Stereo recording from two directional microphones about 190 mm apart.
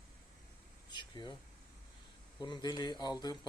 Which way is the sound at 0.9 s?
25° left (ahead or behind).